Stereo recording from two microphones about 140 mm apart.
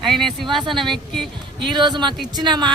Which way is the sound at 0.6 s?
35° right (ahead or behind).